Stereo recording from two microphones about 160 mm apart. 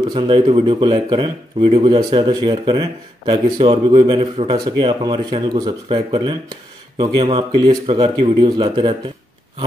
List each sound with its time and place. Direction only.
0.1 s speech: 30° right (ahead or behind)